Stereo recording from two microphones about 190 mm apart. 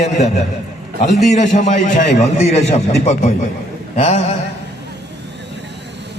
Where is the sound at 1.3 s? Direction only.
40° left (ahead or behind).